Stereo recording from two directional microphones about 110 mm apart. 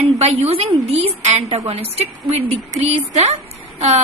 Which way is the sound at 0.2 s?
70° right (ahead or behind).